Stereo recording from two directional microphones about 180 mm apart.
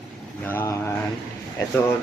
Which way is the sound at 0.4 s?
15° left (ahead or behind).